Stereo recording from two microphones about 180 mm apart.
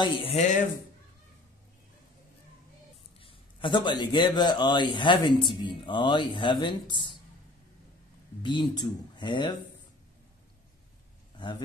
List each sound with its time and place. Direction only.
0.0 s speech: 30° left (ahead or behind)
3.2 s a man's voice: 30° left (ahead or behind)
8.4 s speech: 25° left (ahead or behind)